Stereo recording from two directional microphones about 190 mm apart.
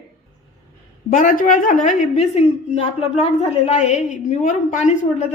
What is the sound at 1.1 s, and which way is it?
A woman's voice, 45° left (ahead or behind).